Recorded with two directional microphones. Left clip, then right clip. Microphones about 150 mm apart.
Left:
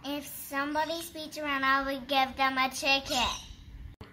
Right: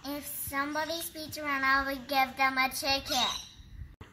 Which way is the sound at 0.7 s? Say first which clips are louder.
Left 2 dB; 25° left (ahead or behind).